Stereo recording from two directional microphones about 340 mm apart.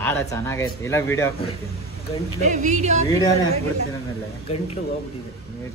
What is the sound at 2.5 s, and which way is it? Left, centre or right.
Speech, right.